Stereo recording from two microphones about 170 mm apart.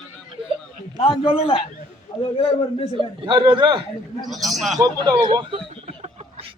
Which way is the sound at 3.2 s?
30° right (ahead or behind).